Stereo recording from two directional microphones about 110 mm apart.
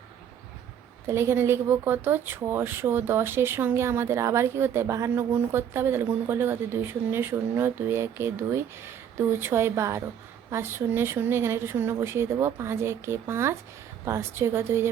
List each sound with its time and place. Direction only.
1.0 s speech: 25° right (ahead or behind)